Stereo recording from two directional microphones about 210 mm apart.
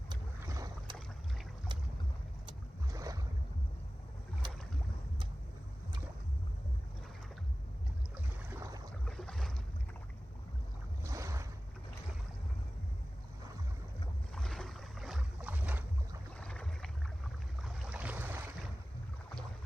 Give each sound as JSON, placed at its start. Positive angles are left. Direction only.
{"t": 0.3, "sound": "boat", "side_deg": -15}
{"t": 2.5, "sound": "boat", "side_deg": -15}
{"t": 8.1, "sound": "boat", "side_deg": -15}
{"t": 9.0, "sound": "boat", "side_deg": 0}
{"t": 11.1, "sound": "boat", "side_deg": -15}
{"t": 14.3, "sound": "boat", "side_deg": 0}
{"t": 16.4, "sound": "boat", "side_deg": 5}